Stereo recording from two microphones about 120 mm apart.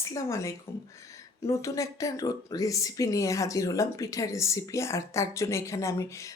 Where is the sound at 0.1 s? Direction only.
25° left (ahead or behind).